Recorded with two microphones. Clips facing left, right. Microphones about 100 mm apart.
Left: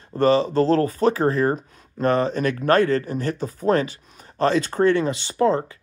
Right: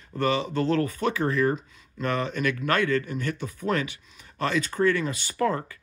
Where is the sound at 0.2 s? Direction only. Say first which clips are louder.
Left 7 dB; 35° left (ahead or behind).